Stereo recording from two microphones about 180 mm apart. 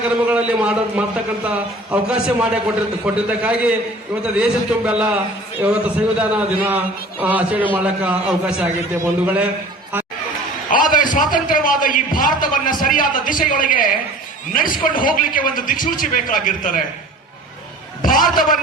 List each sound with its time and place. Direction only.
0.3 s a man's voice: 5° right (ahead or behind)
10.7 s a man's voice: 50° left (ahead or behind)
18.0 s a man's voice: 50° left (ahead or behind)